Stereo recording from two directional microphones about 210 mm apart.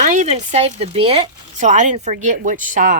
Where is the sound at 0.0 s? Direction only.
35° right (ahead or behind).